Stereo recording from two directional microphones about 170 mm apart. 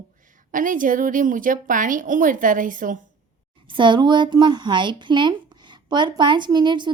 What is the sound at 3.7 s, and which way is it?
A woman's voice, 30° right (ahead or behind).